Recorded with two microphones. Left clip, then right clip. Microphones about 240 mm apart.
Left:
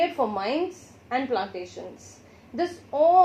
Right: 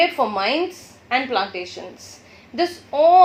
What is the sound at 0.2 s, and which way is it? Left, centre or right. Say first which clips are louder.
A woman's voice: right 6 dB; right.